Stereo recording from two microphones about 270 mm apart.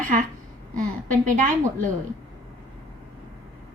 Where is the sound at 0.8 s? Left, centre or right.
Right.